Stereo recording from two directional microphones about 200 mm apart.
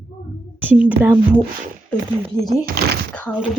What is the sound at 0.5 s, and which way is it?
Speech, 5° right (ahead or behind).